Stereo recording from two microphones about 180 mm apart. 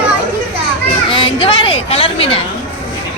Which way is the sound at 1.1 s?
30° left (ahead or behind).